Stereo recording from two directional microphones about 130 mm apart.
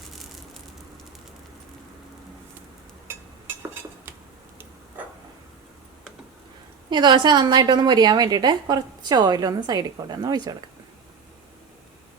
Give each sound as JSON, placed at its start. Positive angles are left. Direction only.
{"t": 6.9, "sound": "a woman's voice", "side_deg": -35}